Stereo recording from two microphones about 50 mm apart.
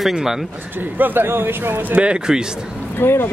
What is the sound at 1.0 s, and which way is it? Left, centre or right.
Speech, right.